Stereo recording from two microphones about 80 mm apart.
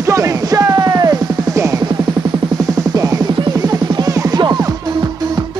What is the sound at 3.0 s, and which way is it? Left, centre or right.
Music, right.